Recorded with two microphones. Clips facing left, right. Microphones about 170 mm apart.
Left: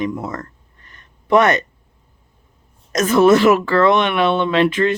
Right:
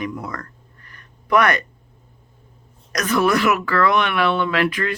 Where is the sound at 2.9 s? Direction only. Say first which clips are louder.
Left 7 dB; 25° left (ahead or behind).